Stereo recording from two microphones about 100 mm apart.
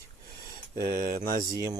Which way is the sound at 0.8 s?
35° right (ahead or behind).